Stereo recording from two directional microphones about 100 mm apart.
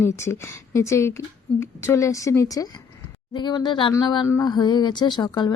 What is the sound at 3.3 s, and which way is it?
Speech, 45° left (ahead or behind).